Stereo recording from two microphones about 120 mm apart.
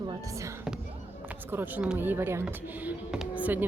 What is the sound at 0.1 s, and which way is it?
Speech, 25° right (ahead or behind).